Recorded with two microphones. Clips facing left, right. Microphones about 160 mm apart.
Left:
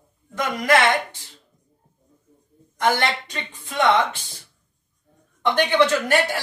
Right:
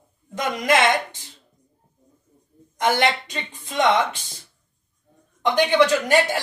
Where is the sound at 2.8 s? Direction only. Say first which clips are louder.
Right 1 dB; 20° right (ahead or behind).